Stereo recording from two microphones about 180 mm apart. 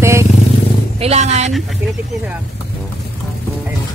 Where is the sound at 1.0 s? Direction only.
40° right (ahead or behind).